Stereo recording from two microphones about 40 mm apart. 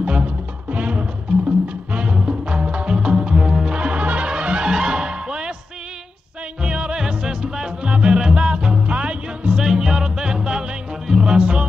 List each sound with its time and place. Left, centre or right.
0.0 s music: right
6.6 s music: right
9.6 s music: centre